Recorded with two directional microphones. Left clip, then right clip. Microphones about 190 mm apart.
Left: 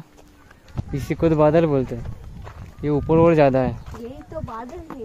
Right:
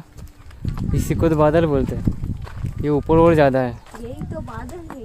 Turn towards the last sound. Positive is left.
turn(degrees=-25)  # may be behind; listen again after turning